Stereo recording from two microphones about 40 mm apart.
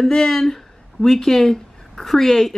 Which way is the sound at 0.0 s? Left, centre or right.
Centre.